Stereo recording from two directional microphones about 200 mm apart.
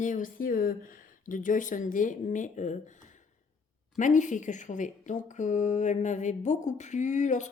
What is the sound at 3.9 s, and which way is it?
Speech, 40° left (ahead or behind).